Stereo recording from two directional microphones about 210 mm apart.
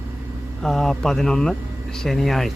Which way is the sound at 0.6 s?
Centre (ahead or behind).